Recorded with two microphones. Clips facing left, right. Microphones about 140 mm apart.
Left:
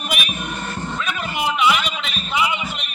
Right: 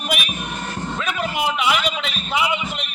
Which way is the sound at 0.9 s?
90° right.